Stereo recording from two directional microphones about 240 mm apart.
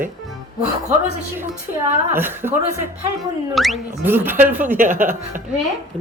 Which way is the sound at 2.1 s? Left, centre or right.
Centre.